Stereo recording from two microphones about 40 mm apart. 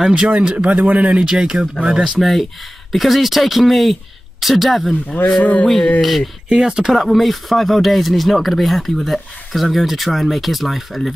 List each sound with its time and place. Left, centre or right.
0.1 s speech: right
0.7 s speech: right
1.0 s speech: right
2.1 s speech: centre
5.4 s a sound: left
5.9 s speech: centre
6.5 s speech: centre
6.8 s speech: centre